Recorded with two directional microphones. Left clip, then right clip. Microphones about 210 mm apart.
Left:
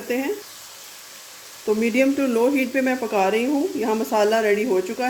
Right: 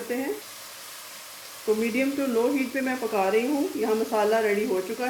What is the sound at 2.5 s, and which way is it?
Speech, 55° left (ahead or behind).